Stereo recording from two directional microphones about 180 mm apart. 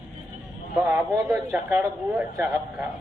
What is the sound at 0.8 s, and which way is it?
A man's voice, 10° right (ahead or behind).